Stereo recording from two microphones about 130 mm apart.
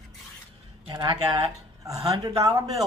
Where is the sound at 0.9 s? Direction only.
35° right (ahead or behind).